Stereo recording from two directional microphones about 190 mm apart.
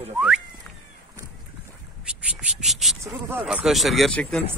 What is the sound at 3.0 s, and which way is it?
A man's voice, 10° right (ahead or behind).